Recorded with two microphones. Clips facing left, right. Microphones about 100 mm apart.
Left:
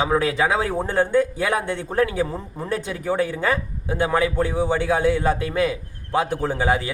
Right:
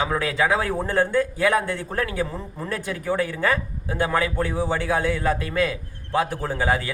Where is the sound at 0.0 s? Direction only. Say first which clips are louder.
Left 3 dB; 25° left (ahead or behind).